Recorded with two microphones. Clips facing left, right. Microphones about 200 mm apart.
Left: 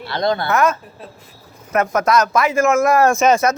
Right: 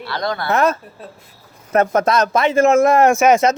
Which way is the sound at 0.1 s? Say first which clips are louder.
Left 4 dB; 25° left (ahead or behind).